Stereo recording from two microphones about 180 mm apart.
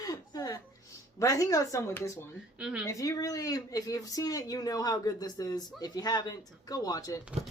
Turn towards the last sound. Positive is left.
turn(degrees=20)  # may be behind; listen again after turning